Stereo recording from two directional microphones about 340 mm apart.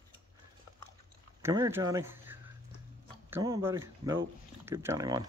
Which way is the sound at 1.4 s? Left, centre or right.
Centre.